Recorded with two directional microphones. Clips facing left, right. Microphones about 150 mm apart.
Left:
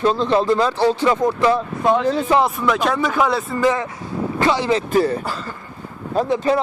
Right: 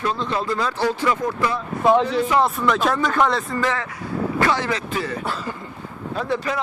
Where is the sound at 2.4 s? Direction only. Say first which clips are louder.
Left 1 dB; 5° left (ahead or behind).